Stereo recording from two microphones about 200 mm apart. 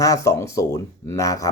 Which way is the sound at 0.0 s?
15° left (ahead or behind).